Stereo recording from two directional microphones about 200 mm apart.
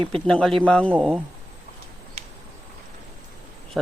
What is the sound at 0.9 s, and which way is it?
Speech, 5° right (ahead or behind).